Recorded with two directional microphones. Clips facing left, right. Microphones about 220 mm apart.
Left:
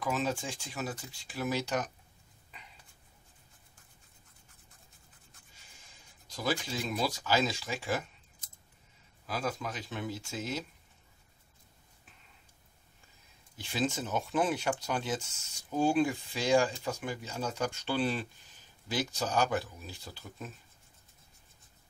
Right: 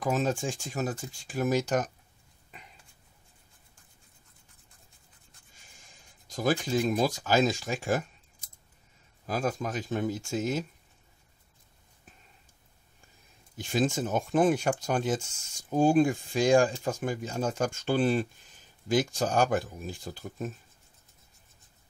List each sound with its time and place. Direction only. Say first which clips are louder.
0.0 s speech: right 5 dB; 45° right (ahead or behind)
6.2 s speech: right 6 dB; 45° right (ahead or behind)
9.2 s speech: right 5 dB; 45° right (ahead or behind)
13.6 s speech: right 5 dB; 45° right (ahead or behind)